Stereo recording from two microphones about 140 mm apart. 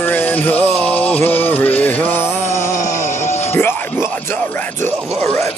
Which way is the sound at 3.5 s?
15° left (ahead or behind).